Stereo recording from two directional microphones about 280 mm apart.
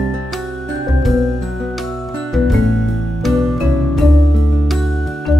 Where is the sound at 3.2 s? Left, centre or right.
Centre.